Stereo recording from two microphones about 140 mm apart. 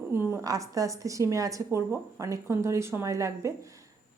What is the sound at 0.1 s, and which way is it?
A woman's voice, 15° right (ahead or behind).